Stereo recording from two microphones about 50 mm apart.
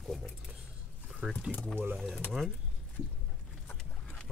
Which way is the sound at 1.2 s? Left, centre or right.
Centre.